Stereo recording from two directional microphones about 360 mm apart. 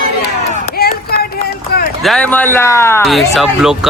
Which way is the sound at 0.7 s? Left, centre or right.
Left.